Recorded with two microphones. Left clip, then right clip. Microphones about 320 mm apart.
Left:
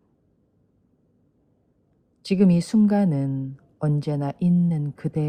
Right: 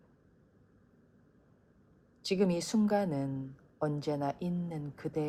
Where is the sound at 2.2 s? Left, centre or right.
Left.